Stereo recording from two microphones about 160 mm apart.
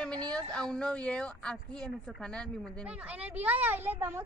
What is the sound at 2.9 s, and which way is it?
Speech, 10° right (ahead or behind).